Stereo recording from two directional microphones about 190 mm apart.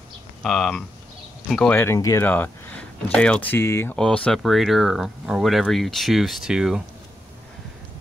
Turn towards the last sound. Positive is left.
turn(degrees=-5)  # may be behind; listen again after turning